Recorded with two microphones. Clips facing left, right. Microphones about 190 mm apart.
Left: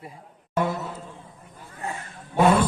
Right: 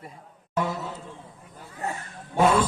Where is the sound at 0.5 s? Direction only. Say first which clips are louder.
Left 2 dB; 55° left (ahead or behind).